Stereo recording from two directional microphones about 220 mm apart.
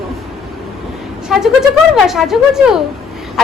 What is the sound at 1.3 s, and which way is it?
A woman's voice, centre (ahead or behind).